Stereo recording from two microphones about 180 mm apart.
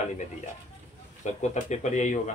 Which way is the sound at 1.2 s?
40° left (ahead or behind).